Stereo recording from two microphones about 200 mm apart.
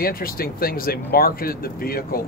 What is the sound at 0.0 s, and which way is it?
Speech, 45° left (ahead or behind).